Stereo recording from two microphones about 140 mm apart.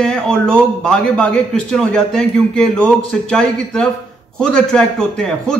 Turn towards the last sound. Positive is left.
turn(degrees=5)  # may be behind; listen again after turning